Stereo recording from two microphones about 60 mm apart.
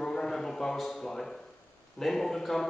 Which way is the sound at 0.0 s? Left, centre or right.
Centre.